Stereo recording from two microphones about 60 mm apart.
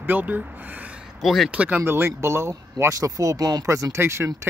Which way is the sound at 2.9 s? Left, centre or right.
Right.